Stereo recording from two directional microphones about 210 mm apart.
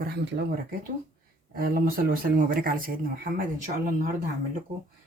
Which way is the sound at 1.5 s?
45° right (ahead or behind).